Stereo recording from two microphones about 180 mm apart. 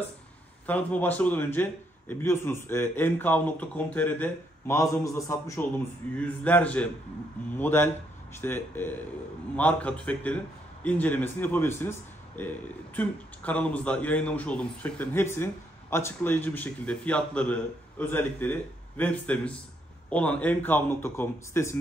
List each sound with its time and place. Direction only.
0.7 s a man's voice: 10° left (ahead or behind)